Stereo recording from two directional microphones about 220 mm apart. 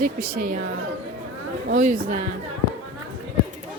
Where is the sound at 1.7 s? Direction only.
35° right (ahead or behind).